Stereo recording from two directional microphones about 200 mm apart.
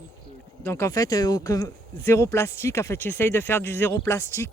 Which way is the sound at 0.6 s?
15° left (ahead or behind).